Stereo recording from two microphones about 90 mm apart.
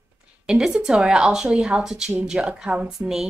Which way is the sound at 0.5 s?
10° right (ahead or behind).